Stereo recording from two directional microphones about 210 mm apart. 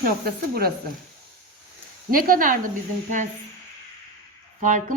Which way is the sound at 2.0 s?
45° right (ahead or behind).